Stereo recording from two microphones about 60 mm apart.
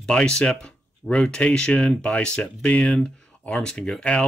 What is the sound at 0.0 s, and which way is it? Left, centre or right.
Speech, centre.